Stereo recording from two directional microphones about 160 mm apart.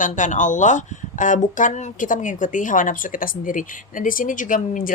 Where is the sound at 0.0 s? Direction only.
50° left (ahead or behind).